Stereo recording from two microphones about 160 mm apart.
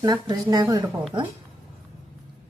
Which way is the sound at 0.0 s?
25° right (ahead or behind).